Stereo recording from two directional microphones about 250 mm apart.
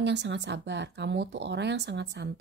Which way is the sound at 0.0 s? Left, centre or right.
Right.